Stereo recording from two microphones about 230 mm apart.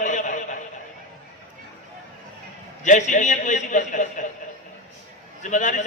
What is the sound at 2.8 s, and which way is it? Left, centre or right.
A man's voice, left.